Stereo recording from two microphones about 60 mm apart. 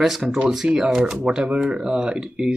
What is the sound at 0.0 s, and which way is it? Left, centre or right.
Speech, centre.